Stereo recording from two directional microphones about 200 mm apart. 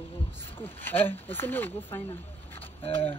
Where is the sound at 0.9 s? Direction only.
10° left (ahead or behind).